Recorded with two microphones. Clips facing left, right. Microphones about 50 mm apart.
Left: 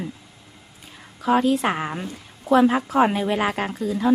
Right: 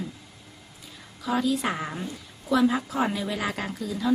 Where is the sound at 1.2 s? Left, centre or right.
Left.